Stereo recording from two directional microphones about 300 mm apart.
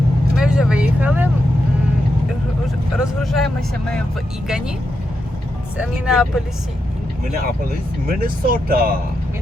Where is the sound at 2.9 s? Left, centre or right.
Centre.